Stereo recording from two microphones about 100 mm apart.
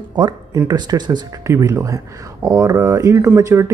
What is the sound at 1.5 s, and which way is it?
Speech, 30° right (ahead or behind).